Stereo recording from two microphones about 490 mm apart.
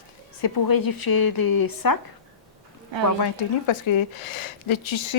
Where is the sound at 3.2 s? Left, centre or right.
Left.